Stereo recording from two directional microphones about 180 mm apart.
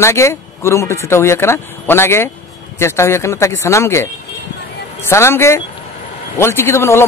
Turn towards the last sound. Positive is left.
turn(degrees=15)  # may be behind; listen again after turning